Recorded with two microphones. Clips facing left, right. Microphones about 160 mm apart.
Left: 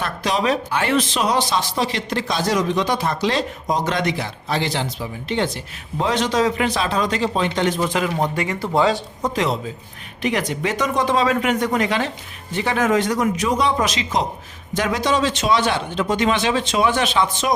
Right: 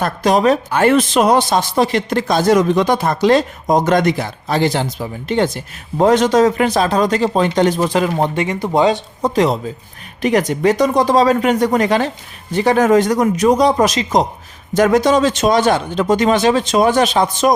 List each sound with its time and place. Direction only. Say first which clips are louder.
0.0 s speech: right 7 dB; 45° right (ahead or behind)
8.4 s speech: right 4 dB; 20° right (ahead or behind)
9.2 s speech: right 7 dB; 40° right (ahead or behind)